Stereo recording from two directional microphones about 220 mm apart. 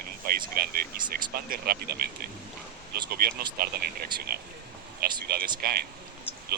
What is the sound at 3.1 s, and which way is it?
Speech, 45° right (ahead or behind).